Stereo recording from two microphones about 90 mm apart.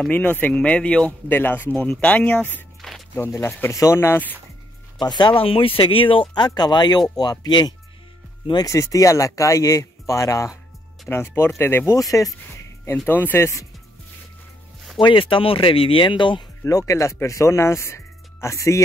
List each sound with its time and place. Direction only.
0.1 s speech: 20° left (ahead or behind)
2.8 s a sound: 5° left (ahead or behind)
3.3 s speech: 30° left (ahead or behind)
4.9 s speech: 55° left (ahead or behind)
8.6 s speech: 40° left (ahead or behind)
12.0 s speech: 40° left (ahead or behind)
12.4 s a sound: 30° left (ahead or behind)
12.9 s speech: 20° left (ahead or behind)
15.0 s speech: 70° left (ahead or behind)
16.6 s speech: 35° left (ahead or behind)